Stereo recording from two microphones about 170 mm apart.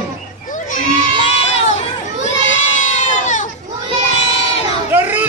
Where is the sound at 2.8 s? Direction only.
45° left (ahead or behind).